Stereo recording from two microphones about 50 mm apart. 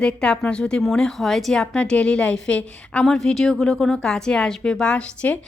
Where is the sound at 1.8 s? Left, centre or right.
Left.